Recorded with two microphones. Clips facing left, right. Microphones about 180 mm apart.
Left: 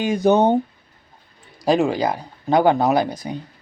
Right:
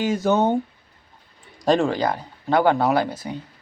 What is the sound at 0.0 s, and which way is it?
Speech, 15° left (ahead or behind).